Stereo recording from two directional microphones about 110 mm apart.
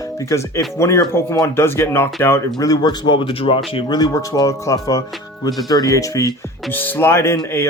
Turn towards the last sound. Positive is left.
turn(degrees=25)  # may be behind; listen again after turning